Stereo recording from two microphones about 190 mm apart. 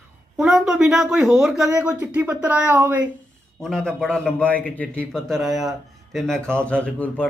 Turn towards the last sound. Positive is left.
turn(degrees=5)  # may be behind; listen again after turning